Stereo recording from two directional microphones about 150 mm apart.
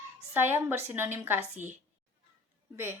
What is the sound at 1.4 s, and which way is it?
Speech, 50° right (ahead or behind).